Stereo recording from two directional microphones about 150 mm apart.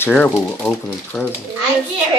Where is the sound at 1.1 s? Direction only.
Centre (ahead or behind).